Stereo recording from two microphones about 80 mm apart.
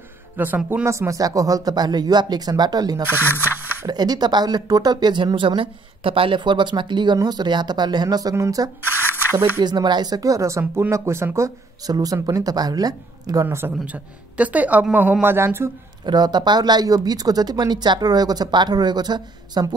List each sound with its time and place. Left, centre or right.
0.4 s speech: right
0.8 s speech: right
7.2 s speech: right
9.6 s speech: right
10.6 s speech: right
13.5 s speech: right
13.8 s speech: centre
15.2 s speech: right
16.1 s speech: right